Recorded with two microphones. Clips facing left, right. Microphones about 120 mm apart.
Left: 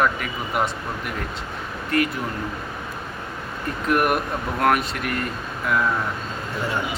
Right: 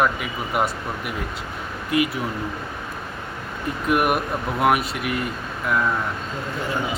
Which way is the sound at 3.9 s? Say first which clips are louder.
Even; 5° right (ahead or behind).